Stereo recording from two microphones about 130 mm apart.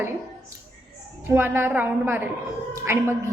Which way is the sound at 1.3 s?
15° right (ahead or behind).